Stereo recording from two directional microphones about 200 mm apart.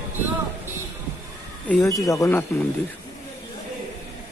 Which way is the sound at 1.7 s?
15° left (ahead or behind).